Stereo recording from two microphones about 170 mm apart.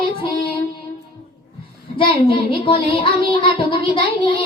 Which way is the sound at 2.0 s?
30° left (ahead or behind).